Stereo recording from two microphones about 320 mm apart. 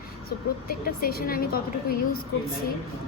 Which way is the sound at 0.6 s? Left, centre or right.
Left.